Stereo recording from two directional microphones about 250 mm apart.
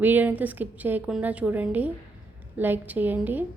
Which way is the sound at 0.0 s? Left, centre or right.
Centre.